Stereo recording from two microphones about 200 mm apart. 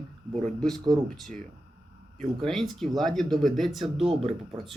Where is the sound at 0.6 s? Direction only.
Centre (ahead or behind).